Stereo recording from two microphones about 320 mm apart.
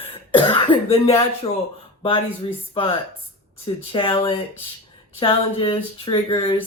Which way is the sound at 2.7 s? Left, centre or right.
Centre.